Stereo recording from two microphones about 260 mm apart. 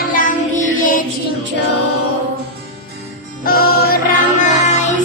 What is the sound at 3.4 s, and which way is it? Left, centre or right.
Music, left.